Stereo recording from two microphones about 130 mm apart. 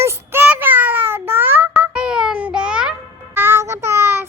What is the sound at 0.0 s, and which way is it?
Child singing, 20° right (ahead or behind).